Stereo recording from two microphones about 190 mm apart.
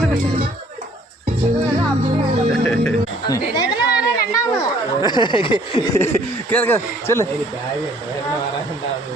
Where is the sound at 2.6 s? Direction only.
5° left (ahead or behind).